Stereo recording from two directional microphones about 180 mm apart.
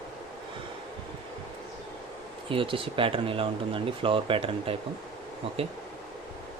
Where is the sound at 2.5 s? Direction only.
30° right (ahead or behind).